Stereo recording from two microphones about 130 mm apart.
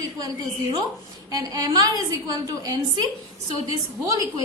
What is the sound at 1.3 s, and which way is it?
A woman's voice, 30° right (ahead or behind).